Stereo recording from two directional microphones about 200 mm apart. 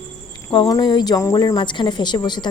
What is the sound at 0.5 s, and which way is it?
A woman's voice, 25° left (ahead or behind).